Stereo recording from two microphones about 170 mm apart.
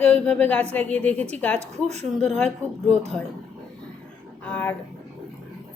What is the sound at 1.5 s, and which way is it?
Speech, 40° right (ahead or behind).